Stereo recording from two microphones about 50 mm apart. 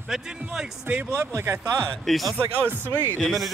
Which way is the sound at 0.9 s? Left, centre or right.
Right.